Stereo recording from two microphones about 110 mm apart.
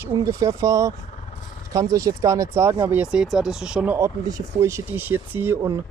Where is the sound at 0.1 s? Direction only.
30° right (ahead or behind).